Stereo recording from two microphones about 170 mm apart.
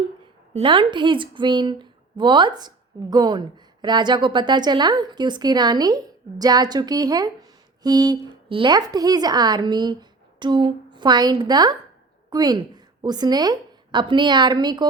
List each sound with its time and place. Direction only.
0.5 s a woman's voice: 30° right (ahead or behind)